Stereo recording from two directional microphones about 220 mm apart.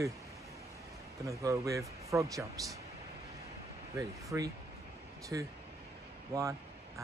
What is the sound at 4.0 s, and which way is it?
Speech, 15° right (ahead or behind).